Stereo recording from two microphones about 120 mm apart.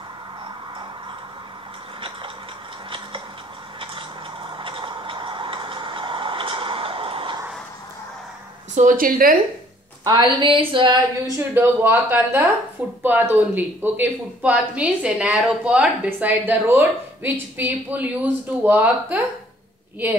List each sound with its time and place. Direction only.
2.0 s a sound: 45° right (ahead or behind)
3.8 s tick-tock: 45° right (ahead or behind)
8.8 s a woman's voice: 85° right
10.0 s speech: 40° right (ahead or behind)
11.2 s speech: 20° right (ahead or behind)